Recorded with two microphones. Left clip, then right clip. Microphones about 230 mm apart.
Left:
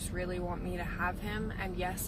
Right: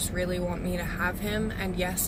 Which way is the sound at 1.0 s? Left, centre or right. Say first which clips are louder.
Right 6 dB; centre.